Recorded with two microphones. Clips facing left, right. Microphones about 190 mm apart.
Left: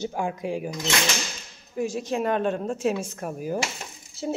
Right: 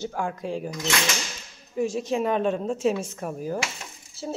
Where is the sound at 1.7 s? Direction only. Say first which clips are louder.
Right 2 dB; centre (ahead or behind).